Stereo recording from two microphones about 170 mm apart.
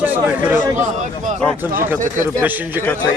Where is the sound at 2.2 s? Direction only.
10° right (ahead or behind).